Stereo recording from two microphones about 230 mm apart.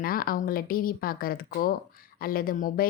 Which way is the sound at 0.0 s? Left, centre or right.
Left.